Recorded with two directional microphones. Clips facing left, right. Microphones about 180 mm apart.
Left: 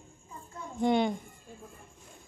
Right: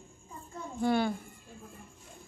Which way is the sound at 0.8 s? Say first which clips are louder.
Left 2 dB; 20° left (ahead or behind).